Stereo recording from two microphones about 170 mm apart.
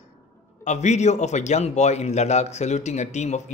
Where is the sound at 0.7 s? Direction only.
45° left (ahead or behind).